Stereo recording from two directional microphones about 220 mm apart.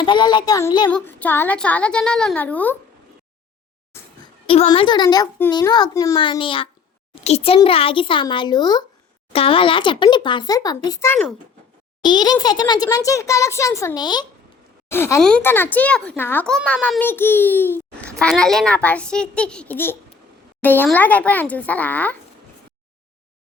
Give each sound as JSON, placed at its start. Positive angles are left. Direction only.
{"t": 0.0, "sound": "a child's voice", "side_deg": 20}
{"t": 0.9, "sound": "a child's voice", "side_deg": 5}
{"t": 4.4, "sound": "a child's voice", "side_deg": 25}
{"t": 12.0, "sound": "a child's voice", "side_deg": 20}